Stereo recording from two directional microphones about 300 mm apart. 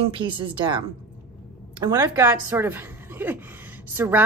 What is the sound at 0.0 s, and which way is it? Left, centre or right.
Speech, centre.